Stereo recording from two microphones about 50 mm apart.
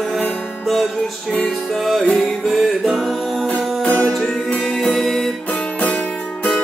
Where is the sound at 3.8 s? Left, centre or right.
Left.